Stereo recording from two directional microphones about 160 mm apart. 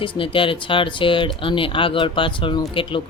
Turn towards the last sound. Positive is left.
turn(degrees=35)  # may be behind; listen again after turning